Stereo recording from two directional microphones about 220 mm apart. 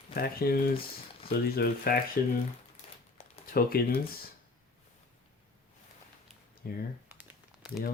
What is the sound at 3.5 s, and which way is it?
Speech, 40° left (ahead or behind).